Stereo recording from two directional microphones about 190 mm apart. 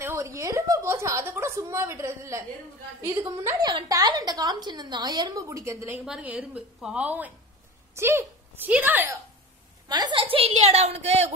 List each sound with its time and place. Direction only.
0.0 s a sound: 15° right (ahead or behind)
3.4 s a woman's voice: 20° right (ahead or behind)
9.8 s a woman's voice: 20° right (ahead or behind)